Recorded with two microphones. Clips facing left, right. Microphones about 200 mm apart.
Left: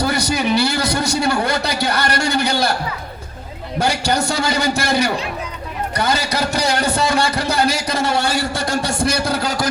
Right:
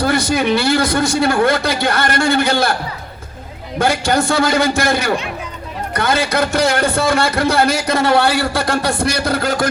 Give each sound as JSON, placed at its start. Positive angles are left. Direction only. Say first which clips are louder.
{"t": 0.0, "sound": "a man's voice", "louder": "right 3 dB", "side_deg": -50}
{"t": 3.8, "sound": "a man's voice", "louder": "right 3 dB", "side_deg": -55}